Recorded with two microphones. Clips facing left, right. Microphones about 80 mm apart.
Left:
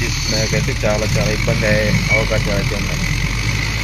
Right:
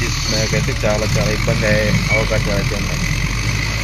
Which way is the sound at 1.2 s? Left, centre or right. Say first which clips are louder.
Even; right.